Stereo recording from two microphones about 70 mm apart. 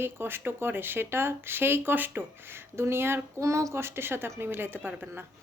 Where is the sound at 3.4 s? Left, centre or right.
Right.